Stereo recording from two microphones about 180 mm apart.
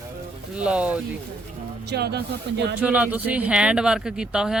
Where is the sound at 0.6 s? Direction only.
5° right (ahead or behind).